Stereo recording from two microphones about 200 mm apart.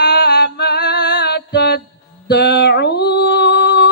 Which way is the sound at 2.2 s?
55° left (ahead or behind).